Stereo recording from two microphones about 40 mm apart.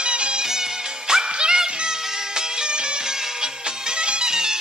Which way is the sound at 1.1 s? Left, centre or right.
Centre.